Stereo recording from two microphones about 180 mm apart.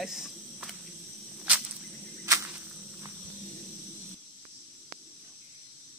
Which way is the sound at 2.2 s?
15° right (ahead or behind).